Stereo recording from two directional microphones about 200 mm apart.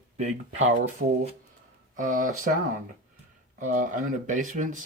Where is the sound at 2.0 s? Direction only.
40° right (ahead or behind).